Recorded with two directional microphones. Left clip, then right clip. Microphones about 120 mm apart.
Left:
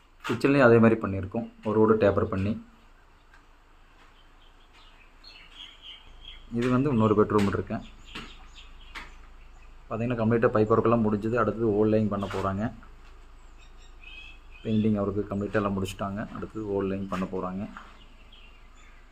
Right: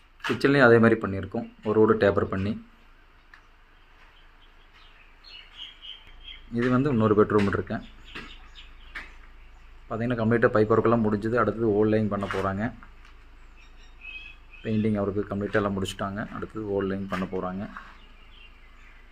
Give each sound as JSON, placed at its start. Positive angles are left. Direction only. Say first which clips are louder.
{"t": 0.3, "sound": "speech", "louder": "right 1 dB", "side_deg": -5}
{"t": 6.5, "sound": "speech", "louder": "right 1 dB", "side_deg": -10}
{"t": 9.9, "sound": "speech", "louder": "right 1 dB", "side_deg": -15}
{"t": 14.6, "sound": "speech", "louder": "right 1 dB", "side_deg": -15}